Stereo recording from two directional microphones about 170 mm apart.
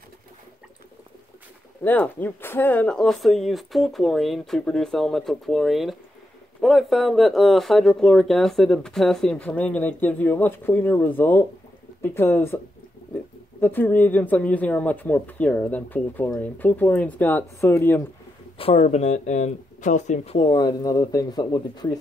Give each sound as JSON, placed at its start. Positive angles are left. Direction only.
{"t": 1.9, "sound": "speech", "side_deg": 10}
{"t": 13.6, "sound": "speech", "side_deg": 10}
{"t": 18.6, "sound": "speech", "side_deg": 35}